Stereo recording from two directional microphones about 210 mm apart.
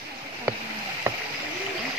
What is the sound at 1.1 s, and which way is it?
Rowboat, 10° right (ahead or behind).